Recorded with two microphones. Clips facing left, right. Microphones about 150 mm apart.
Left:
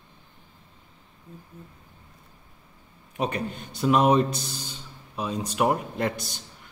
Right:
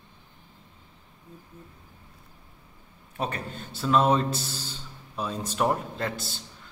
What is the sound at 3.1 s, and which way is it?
A man's voice, 15° left (ahead or behind).